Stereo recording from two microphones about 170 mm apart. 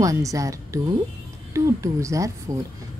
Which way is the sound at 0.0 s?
20° right (ahead or behind).